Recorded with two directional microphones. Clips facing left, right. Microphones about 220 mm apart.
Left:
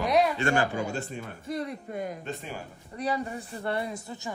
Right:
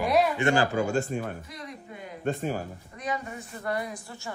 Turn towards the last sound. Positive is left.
turn(degrees=20)  # may be behind; listen again after turning